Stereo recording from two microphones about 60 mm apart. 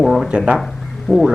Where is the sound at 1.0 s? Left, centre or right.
Centre.